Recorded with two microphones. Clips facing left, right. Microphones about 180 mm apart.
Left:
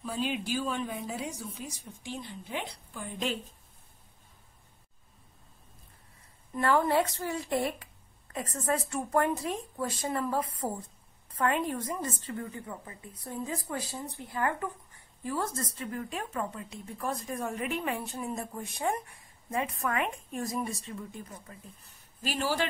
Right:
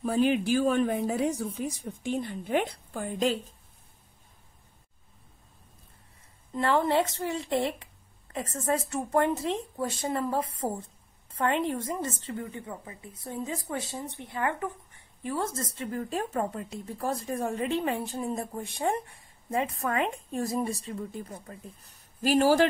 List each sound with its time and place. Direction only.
0.0 s speech: 55° right (ahead or behind)
6.5 s a woman's voice: 25° right (ahead or behind); by 22.7 s 45° right (ahead or behind)